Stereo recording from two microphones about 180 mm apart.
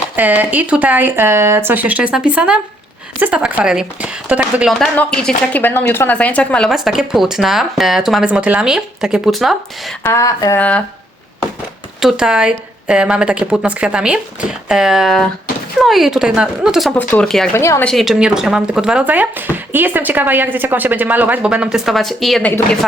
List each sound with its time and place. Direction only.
0.2 s speech: 10° right (ahead or behind)
10.0 s a woman's voice: 15° left (ahead or behind)
10.6 s a woman's voice: 5° left (ahead or behind)
11.9 s speech: 5° right (ahead or behind)
17.6 s a woman's voice: 15° left (ahead or behind)
17.8 s speech: centre (ahead or behind)